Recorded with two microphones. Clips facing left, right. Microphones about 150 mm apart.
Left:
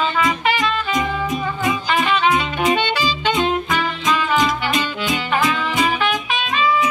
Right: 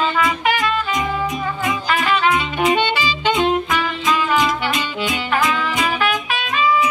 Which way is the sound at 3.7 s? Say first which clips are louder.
Even; 5° right (ahead or behind).